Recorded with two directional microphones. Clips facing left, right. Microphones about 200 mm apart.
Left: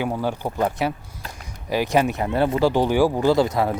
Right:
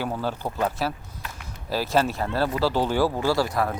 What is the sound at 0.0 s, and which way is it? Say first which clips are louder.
Speech: left 4 dB; 15° left (ahead or behind).